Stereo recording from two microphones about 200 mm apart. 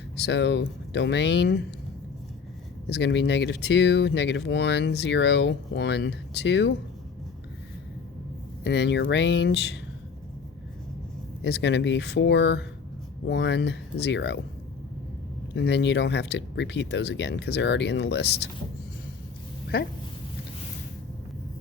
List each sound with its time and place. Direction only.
0.2 s speech: 60° left (ahead or behind)
2.9 s speech: 60° left (ahead or behind)
8.6 s speech: 60° left (ahead or behind)
11.4 s speech: 60° left (ahead or behind)
15.5 s speech: 60° left (ahead or behind)
19.7 s speech: 50° left (ahead or behind)